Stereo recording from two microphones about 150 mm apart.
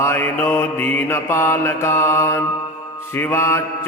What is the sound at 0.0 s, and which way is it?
Mantra, 15° left (ahead or behind).